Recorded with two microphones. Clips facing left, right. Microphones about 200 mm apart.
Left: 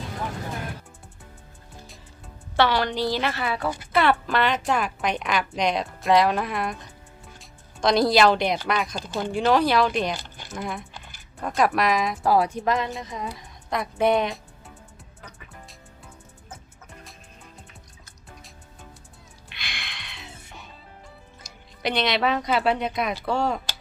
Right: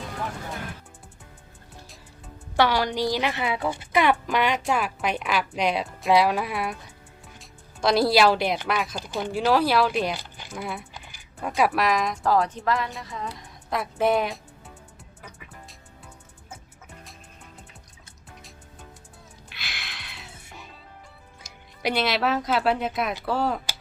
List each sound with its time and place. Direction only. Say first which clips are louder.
2.6 s speech: even; 10° right (ahead or behind); by 13.3 s 15° left (ahead or behind)
13.3 s a woman's voice: left 1 dB; centre (ahead or behind)
15.2 s music: even; 10° right (ahead or behind)
19.5 s music: left 1 dB; 5° right (ahead or behind)
21.8 s speech: even; 5° right (ahead or behind)